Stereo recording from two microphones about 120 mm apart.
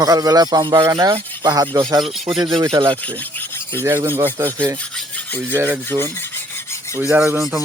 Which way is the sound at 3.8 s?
20° right (ahead or behind).